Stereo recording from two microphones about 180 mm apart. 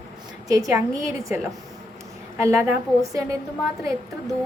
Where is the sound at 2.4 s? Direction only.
15° right (ahead or behind).